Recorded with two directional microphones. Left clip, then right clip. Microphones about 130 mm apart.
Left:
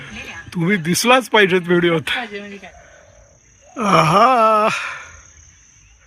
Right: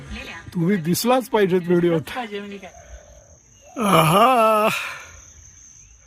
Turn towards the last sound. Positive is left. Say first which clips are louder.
# left 3 dB
turn(degrees=-5)  # may be behind; listen again after turning